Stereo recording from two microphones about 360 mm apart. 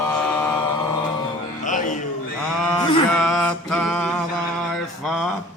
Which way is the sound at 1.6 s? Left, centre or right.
Left.